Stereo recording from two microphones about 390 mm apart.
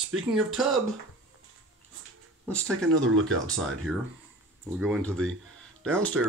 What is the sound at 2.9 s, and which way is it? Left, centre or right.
Speech, right.